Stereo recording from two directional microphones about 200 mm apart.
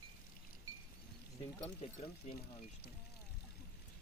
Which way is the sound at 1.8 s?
30° left (ahead or behind).